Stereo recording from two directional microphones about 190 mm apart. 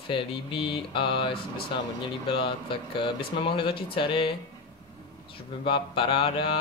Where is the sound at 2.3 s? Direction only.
25° left (ahead or behind).